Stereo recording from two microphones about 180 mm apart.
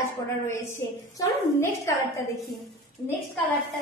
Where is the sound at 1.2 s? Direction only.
15° left (ahead or behind).